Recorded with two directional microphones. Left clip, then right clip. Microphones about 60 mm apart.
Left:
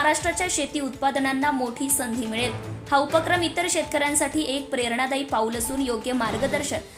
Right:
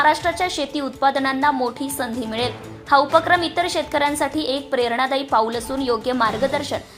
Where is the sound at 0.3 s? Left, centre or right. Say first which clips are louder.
Right 4 dB; right.